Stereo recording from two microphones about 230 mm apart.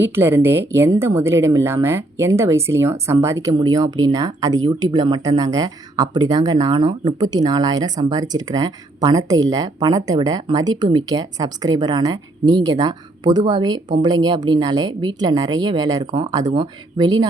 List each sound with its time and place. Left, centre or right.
0.0 s speech: centre